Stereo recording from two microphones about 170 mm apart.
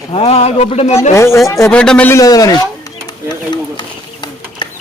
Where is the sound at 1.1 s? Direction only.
15° left (ahead or behind).